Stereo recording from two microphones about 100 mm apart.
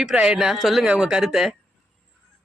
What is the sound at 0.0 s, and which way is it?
A woman's voice, 10° right (ahead or behind).